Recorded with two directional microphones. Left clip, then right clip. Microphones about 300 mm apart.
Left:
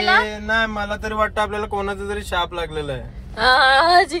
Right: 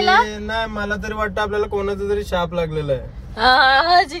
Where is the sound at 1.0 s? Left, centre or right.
Left.